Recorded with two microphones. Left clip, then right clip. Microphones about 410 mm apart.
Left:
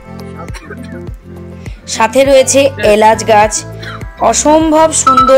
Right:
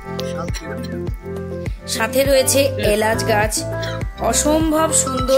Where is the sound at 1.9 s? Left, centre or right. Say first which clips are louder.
Left 9 dB; right.